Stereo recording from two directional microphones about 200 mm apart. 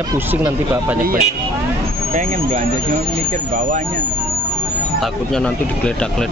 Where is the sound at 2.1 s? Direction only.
40° right (ahead or behind).